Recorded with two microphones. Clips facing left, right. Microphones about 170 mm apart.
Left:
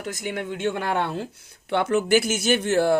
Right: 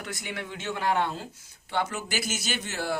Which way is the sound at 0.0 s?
45° left (ahead or behind).